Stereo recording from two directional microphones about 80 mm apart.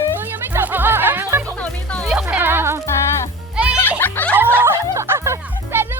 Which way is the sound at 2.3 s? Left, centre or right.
Right.